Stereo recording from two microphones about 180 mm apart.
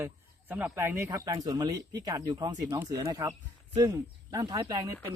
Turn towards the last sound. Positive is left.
turn(degrees=-20)  # may be behind; listen again after turning